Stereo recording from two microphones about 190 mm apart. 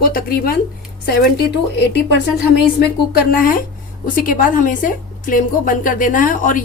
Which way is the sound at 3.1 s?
45° left (ahead or behind).